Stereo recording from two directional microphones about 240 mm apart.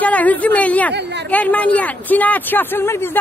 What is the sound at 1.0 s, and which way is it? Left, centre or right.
Speech, right.